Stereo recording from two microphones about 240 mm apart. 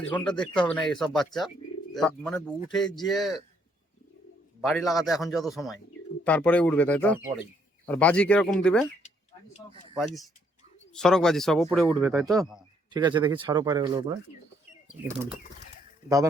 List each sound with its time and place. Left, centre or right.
0.0 s a man's voice: centre
4.6 s a man's voice: centre
9.0 s a sound: left
10.9 s a man's voice: centre
11.9 s speech: centre